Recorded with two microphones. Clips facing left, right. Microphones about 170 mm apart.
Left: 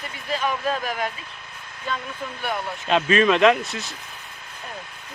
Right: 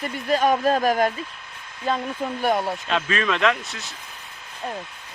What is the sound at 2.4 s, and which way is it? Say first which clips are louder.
Speech: right 6 dB; 40° right (ahead or behind).